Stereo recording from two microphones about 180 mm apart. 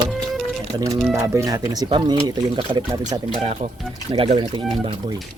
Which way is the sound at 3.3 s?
35° right (ahead or behind).